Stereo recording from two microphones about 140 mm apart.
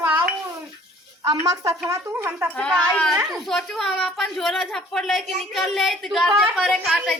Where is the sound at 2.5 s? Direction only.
5° left (ahead or behind).